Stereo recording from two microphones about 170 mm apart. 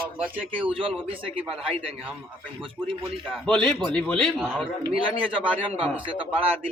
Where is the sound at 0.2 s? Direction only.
10° right (ahead or behind).